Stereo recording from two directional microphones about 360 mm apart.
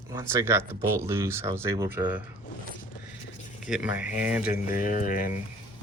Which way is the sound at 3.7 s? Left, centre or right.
Centre.